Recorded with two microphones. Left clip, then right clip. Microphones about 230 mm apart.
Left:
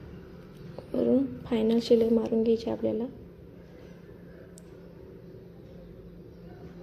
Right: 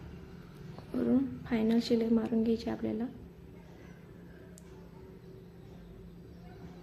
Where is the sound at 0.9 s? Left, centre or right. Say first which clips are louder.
Left 6 dB; centre.